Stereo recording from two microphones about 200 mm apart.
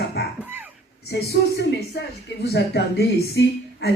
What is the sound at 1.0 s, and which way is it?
Speech, 55° left (ahead or behind).